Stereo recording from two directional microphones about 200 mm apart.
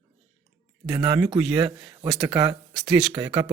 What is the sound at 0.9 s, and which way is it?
Speech, 15° right (ahead or behind).